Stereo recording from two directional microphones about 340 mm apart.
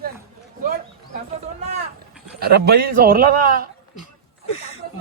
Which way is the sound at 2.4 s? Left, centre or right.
Right.